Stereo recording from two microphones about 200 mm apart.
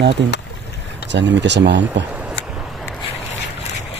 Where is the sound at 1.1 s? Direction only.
60° right (ahead or behind).